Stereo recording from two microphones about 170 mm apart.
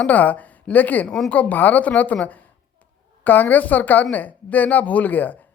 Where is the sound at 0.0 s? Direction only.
10° left (ahead or behind).